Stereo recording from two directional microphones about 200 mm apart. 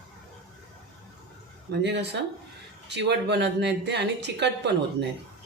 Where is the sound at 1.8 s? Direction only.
60° right (ahead or behind).